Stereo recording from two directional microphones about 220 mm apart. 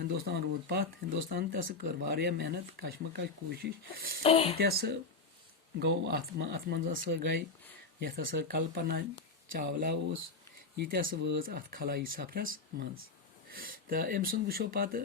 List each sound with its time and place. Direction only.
0.0 s speech: 45° right (ahead or behind)
4.2 s speech: 25° left (ahead or behind)
4.5 s speech: 45° right (ahead or behind)